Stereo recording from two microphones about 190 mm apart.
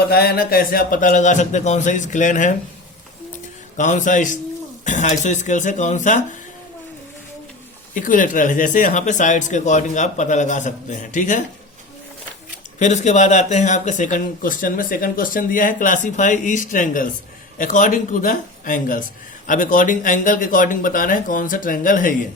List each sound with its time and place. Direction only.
0.1 s speech: 55° left (ahead or behind)
3.8 s speech: 40° left (ahead or behind)
7.9 s speech: 45° left (ahead or behind)
12.8 s speech: 40° left (ahead or behind)